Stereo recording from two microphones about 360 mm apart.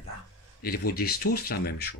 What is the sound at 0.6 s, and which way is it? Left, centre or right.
Speech, left.